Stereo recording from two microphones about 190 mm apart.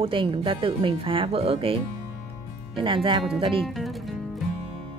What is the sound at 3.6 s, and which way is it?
Speech, centre (ahead or behind).